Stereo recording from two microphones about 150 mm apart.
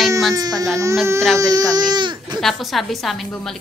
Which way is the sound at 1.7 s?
30° right (ahead or behind).